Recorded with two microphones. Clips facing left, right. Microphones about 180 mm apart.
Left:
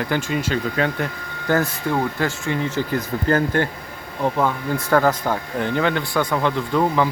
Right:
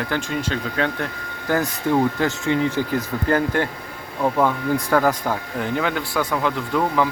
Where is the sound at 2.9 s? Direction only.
5° right (ahead or behind).